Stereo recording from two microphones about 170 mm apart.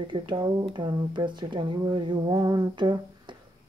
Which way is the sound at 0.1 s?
30° right (ahead or behind).